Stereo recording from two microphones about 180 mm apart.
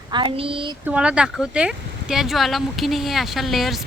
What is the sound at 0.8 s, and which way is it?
Speech, 5° right (ahead or behind).